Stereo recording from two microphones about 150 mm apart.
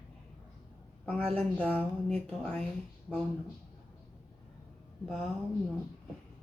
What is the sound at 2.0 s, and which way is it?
Speech, 5° left (ahead or behind).